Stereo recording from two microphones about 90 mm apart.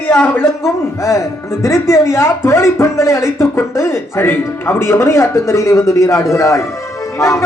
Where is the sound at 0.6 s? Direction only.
30° left (ahead or behind).